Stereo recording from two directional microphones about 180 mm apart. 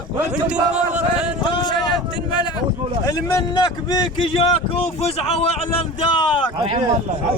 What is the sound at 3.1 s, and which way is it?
A man's voice, 20° left (ahead or behind).